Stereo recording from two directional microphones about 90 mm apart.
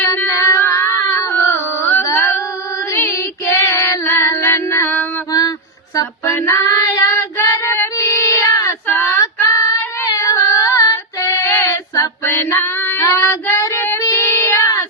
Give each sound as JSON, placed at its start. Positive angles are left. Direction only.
{"t": 0.3, "sound": "a sound", "side_deg": 35}
{"t": 3.1, "sound": "child singing", "side_deg": 35}
{"t": 5.3, "sound": "mantra", "side_deg": 45}
{"t": 6.3, "sound": "child singing", "side_deg": 30}
{"t": 7.4, "sound": "female singing", "side_deg": 35}
{"t": 7.9, "sound": "child singing", "side_deg": 30}
{"t": 9.2, "sound": "female singing", "side_deg": 35}
{"t": 11.4, "sound": "child singing", "side_deg": 25}
{"t": 12.2, "sound": "female singing", "side_deg": 25}
{"t": 13.1, "sound": "child singing", "side_deg": 35}